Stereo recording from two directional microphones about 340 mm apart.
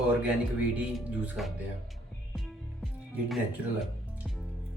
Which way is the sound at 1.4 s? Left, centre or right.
Centre.